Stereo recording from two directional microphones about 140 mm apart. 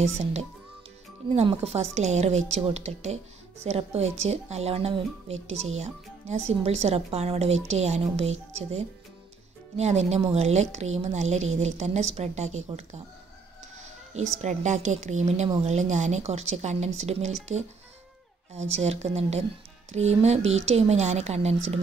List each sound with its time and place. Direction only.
0.0 s speech: 50° right (ahead or behind)
14.1 s speech: 55° right (ahead or behind)
18.5 s speech: 50° right (ahead or behind)